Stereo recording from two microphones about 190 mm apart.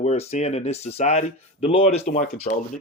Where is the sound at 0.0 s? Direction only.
35° left (ahead or behind).